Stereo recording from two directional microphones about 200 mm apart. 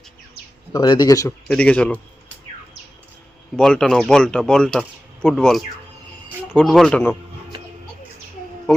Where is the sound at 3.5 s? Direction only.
5° left (ahead or behind).